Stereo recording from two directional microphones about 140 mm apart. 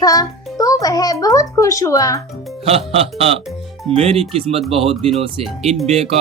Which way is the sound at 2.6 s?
45° right (ahead or behind).